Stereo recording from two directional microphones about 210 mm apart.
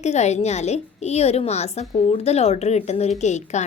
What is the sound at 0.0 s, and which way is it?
A woman's voice, 30° left (ahead or behind).